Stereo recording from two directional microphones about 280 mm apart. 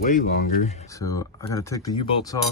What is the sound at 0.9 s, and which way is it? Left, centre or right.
Speech, centre.